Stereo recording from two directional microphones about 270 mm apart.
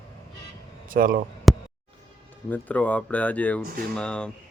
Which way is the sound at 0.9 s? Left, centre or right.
Right.